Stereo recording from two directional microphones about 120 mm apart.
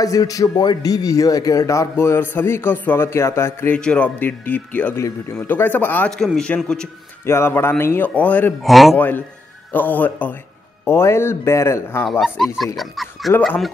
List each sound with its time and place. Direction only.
0.0 s a man's voice: 30° left (ahead or behind)
3.7 s a man's voice: 10° left (ahead or behind)
6.1 s a man's voice: 5° left (ahead or behind)
7.2 s a man's voice: 20° left (ahead or behind)
8.6 s a man's voice: centre (ahead or behind)
8.9 s a man's voice: 15° left (ahead or behind)
12.0 s a man's voice: centre (ahead or behind)